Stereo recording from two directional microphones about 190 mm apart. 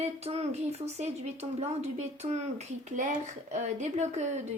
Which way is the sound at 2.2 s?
35° right (ahead or behind).